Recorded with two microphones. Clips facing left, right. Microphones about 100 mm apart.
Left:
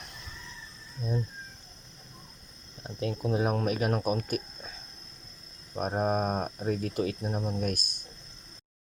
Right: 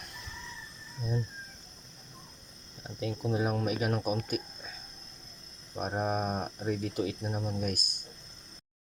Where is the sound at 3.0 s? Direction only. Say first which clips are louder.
Left 2 dB; 50° left (ahead or behind).